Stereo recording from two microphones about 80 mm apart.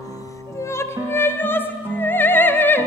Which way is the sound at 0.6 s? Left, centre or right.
Left.